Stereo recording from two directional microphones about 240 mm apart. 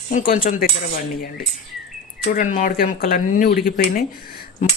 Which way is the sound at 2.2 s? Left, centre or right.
Left.